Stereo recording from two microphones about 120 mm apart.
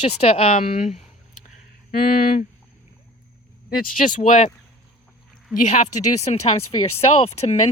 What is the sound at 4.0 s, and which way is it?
Speech, 90° left.